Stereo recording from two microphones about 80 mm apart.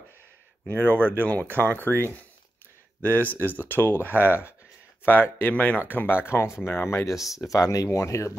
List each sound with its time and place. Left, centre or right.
0.7 s speech: left
3.0 s speech: left
7.3 s speech: left